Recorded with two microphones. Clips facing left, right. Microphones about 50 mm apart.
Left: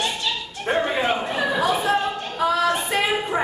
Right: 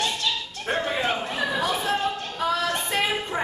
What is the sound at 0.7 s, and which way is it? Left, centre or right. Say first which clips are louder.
Chatter: left 4 dB; centre.